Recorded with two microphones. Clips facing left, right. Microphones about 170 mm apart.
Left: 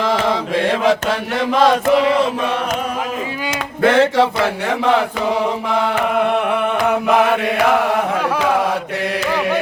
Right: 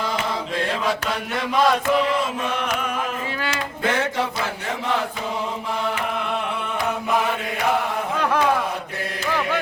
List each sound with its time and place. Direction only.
0.0 s mantra: 90° left
1.6 s chant: 90° left
3.8 s chant: 75° left (ahead or behind)